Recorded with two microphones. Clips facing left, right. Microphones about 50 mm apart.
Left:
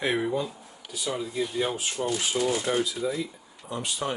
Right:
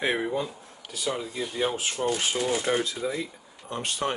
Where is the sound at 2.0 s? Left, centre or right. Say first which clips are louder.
Even; right.